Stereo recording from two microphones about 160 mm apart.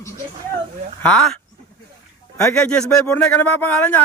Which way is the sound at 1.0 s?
5° left (ahead or behind).